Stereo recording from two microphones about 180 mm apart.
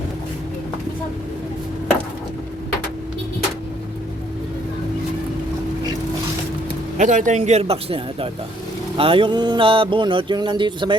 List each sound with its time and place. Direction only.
7.0 s speech: 45° right (ahead or behind)
9.0 s music: 30° right (ahead or behind)